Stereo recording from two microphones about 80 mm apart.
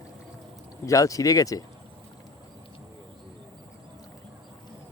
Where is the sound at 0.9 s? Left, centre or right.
Left.